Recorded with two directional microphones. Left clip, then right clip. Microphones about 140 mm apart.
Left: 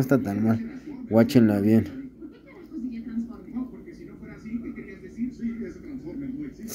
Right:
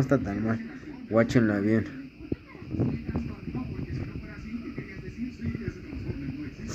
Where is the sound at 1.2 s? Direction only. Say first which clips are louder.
Left 3 dB; 40° left (ahead or behind).